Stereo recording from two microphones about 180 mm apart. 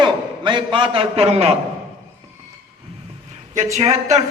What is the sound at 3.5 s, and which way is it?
Speech, 35° right (ahead or behind).